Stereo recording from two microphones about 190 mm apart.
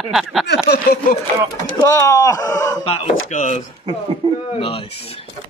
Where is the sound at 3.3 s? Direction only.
40° left (ahead or behind).